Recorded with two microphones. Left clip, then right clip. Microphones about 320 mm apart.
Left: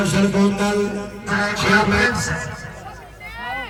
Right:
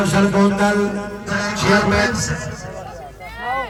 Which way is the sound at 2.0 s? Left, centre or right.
Centre.